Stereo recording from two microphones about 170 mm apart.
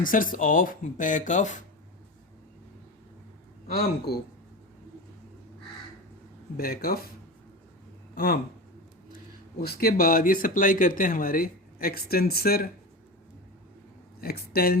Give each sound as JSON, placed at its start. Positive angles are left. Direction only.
{"t": 0.0, "sound": "speech", "side_deg": 55}
{"t": 3.7, "sound": "speech", "side_deg": 65}
{"t": 6.6, "sound": "speech", "side_deg": 60}
{"t": 8.1, "sound": "speech", "side_deg": 60}
{"t": 14.2, "sound": "speech", "side_deg": 60}